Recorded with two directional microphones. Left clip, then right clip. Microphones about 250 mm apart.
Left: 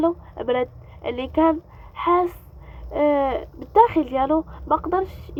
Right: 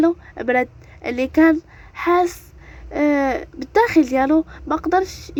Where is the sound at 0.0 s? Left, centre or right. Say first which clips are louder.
Right 4 dB; right.